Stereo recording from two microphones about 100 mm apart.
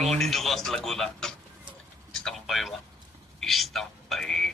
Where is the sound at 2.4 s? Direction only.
Centre (ahead or behind).